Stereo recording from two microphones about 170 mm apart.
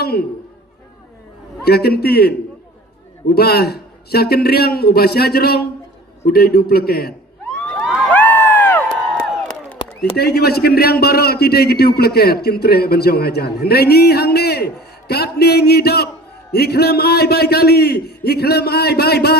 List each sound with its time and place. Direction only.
0.0 s a man's voice: 65° left (ahead or behind)
1.6 s a man's voice: 65° left (ahead or behind)
8.1 s crowd: 10° left (ahead or behind)
10.2 s a man's voice: 70° left (ahead or behind)